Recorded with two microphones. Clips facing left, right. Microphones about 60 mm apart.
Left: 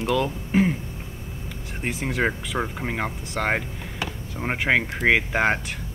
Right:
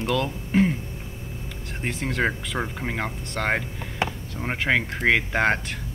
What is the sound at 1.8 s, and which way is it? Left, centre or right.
Speech, centre.